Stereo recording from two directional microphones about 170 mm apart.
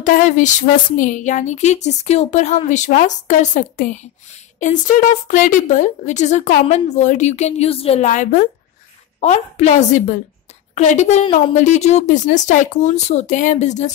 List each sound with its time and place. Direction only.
0.0 s speech: 50° left (ahead or behind)